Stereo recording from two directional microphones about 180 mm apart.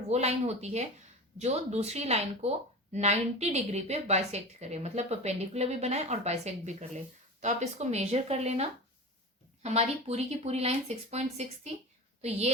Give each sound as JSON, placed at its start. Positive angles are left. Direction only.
{"t": 0.1, "sound": "speech", "side_deg": -35}
{"t": 9.6, "sound": "speech", "side_deg": -35}